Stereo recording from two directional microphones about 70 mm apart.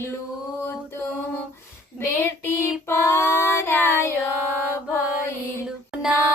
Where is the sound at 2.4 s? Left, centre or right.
Left.